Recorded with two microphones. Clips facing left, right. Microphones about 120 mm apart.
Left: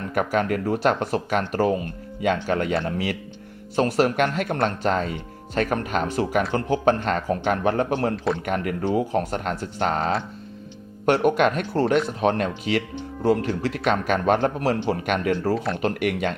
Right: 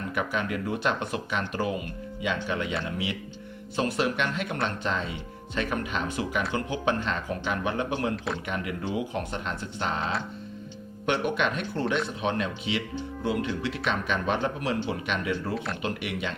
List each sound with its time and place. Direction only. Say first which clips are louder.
0.1 s speech: left 8 dB; 50° left (ahead or behind)
8.1 s a man's voice: left 7 dB; centre (ahead or behind)
8.4 s speech: left 7 dB; 50° left (ahead or behind)
15.5 s a man's voice: left 6 dB; centre (ahead or behind)
15.8 s speech: left 8 dB; 50° left (ahead or behind)